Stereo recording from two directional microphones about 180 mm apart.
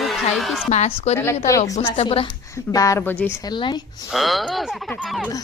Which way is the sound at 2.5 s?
15° left (ahead or behind).